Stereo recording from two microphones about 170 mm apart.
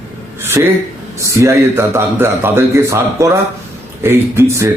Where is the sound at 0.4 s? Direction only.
15° right (ahead or behind).